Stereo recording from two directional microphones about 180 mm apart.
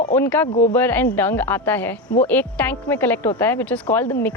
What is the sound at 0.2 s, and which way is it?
Speech, 10° left (ahead or behind).